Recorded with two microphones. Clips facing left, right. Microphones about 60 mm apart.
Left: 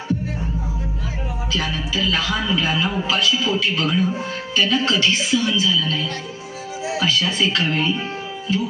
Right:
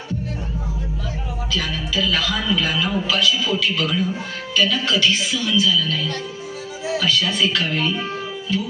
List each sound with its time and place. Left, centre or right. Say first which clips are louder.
1.5 s a man's voice: even; left